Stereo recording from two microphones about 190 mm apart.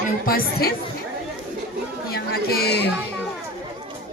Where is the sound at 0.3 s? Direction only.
50° left (ahead or behind).